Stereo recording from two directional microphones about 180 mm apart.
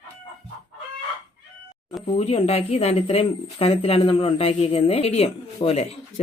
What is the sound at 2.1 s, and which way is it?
Speech, 35° left (ahead or behind).